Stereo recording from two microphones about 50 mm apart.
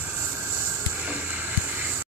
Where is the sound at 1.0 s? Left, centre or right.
Right.